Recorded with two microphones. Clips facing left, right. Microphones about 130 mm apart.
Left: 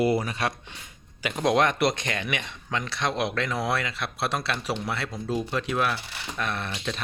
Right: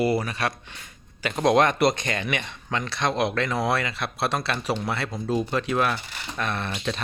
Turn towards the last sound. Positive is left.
turn(degrees=0)  # may be behind; listen again after turning